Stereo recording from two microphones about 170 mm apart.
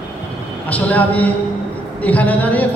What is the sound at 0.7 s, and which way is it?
A man's voice, 10° left (ahead or behind).